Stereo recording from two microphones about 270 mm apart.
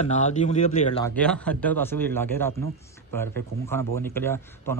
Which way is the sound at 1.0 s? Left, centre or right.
Centre.